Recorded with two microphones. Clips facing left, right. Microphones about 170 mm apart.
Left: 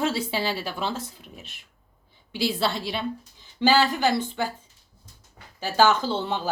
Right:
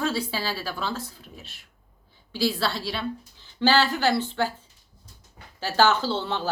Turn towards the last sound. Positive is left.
turn(degrees=15)  # may be behind; listen again after turning